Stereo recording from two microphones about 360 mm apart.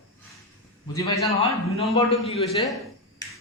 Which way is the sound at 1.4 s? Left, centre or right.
Centre.